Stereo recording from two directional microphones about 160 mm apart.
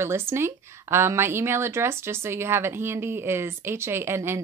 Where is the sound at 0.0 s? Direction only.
15° right (ahead or behind).